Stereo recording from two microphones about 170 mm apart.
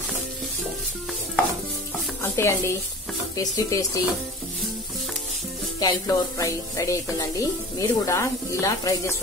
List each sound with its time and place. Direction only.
2.2 s speech: 15° left (ahead or behind)
5.8 s speech: 20° left (ahead or behind)